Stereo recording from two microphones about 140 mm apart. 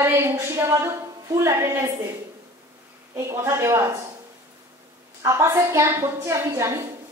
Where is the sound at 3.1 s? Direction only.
20° right (ahead or behind).